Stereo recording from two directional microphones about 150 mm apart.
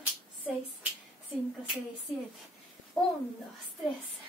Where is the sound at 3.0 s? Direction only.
Centre (ahead or behind).